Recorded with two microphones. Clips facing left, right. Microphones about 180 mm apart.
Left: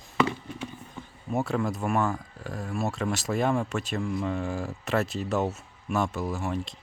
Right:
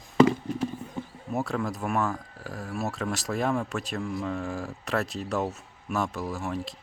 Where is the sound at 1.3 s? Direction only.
Centre (ahead or behind).